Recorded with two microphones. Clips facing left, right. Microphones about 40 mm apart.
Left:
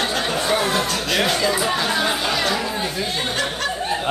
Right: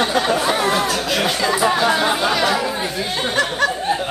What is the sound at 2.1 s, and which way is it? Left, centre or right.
Chatter, centre.